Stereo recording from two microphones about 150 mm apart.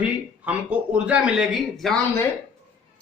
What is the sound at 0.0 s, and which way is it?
Speech, 10° right (ahead or behind).